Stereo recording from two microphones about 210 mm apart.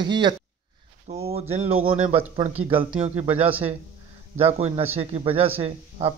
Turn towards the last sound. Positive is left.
turn(degrees=-30)  # may be behind; listen again after turning